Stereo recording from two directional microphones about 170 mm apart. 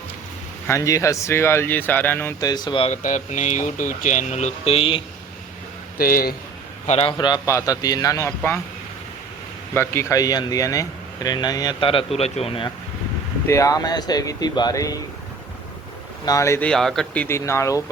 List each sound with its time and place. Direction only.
0.7 s speech: 20° left (ahead or behind)
2.9 s speech: 45° left (ahead or behind)
6.0 s speech: 60° left (ahead or behind)
6.8 s speech: 35° left (ahead or behind); by 8.6 s 15° left (ahead or behind)
9.7 s speech: 15° left (ahead or behind); by 12.7 s 30° left (ahead or behind)
13.5 s speech: 20° left (ahead or behind)
16.2 s speech: 20° left (ahead or behind); by 17.2 s centre (ahead or behind)
17.2 s speech: 15° left (ahead or behind)